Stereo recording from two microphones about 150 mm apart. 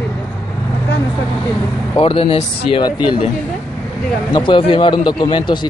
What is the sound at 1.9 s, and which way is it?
Speech, 40° left (ahead or behind).